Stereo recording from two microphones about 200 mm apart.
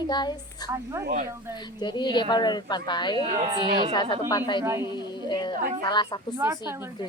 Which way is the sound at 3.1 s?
35° right (ahead or behind).